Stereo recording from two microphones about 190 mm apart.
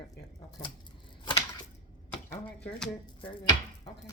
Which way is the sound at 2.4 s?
5° left (ahead or behind).